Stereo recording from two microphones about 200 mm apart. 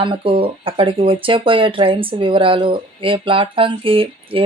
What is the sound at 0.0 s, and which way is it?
Speech, 25° right (ahead or behind).